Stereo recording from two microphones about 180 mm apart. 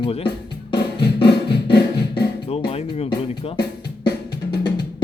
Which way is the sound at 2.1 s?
65° left (ahead or behind).